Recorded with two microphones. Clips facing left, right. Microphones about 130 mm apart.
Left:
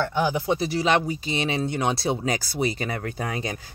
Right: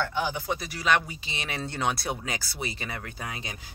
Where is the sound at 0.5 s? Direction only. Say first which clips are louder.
Left 5 dB; 30° left (ahead or behind).